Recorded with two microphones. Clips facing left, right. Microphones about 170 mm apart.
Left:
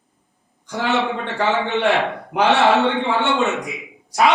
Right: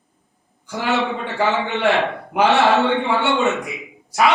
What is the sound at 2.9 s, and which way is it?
Speech, 20° left (ahead or behind).